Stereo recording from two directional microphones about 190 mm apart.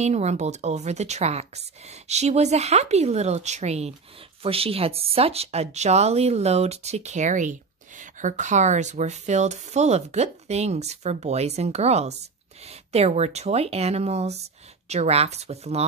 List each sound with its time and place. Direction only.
0.0 s speech: 35° right (ahead or behind)